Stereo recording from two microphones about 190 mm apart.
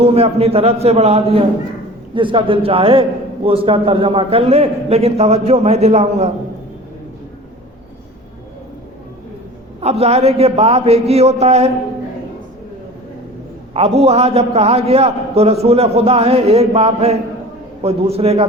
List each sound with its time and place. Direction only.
0.0 s a man's voice: 30° right (ahead or behind)
9.8 s a man's voice: 35° right (ahead or behind)
13.7 s a man's voice: 30° right (ahead or behind)